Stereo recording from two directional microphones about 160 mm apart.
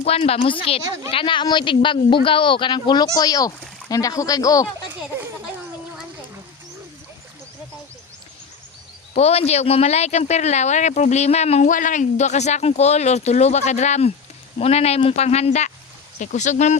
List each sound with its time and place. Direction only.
0.0 s speech: 40° left (ahead or behind); by 4.7 s 20° left (ahead or behind)
9.1 s speech: 40° left (ahead or behind)